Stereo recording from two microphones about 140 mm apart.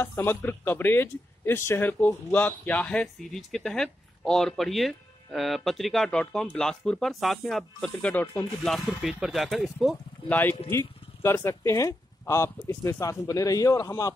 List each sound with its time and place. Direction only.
0.0 s speech: 15° left (ahead or behind); by 9.9 s centre (ahead or behind)
10.2 s a man's voice: 10° left (ahead or behind)